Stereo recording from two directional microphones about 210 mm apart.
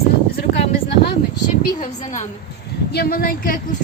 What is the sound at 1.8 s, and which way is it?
Speech, 35° left (ahead or behind).